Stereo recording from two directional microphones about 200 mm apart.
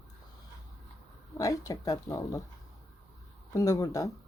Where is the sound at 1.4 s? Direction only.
20° left (ahead or behind).